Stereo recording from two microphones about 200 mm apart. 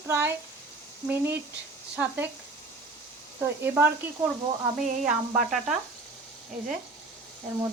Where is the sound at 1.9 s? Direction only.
10° right (ahead or behind).